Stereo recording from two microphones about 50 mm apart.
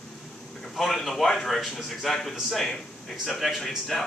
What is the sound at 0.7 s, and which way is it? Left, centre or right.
A man's voice, centre.